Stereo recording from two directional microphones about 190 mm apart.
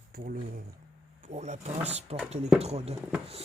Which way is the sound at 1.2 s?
35° right (ahead or behind).